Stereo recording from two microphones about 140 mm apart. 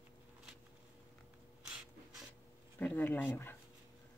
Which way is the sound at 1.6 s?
5° right (ahead or behind).